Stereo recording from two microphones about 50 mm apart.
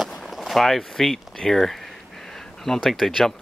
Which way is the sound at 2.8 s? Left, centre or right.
Centre.